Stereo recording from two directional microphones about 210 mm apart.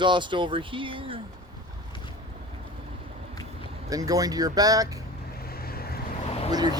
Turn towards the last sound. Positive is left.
turn(degrees=30)  # may be behind; listen again after turning